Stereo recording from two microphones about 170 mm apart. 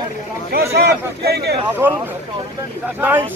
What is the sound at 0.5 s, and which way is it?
Speech, 65° right (ahead or behind).